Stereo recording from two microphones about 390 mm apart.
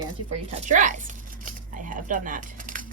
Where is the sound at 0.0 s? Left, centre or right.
Centre.